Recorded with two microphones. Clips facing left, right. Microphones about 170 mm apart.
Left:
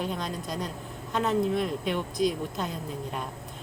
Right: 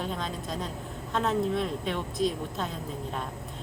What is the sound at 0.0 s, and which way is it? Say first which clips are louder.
A woman's voice: left 1 dB; centre (ahead or behind).